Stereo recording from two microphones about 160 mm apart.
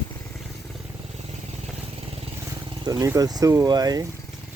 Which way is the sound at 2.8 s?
20° right (ahead or behind).